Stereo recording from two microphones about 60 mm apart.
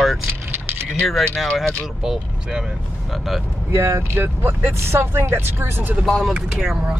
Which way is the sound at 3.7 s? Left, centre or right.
Right.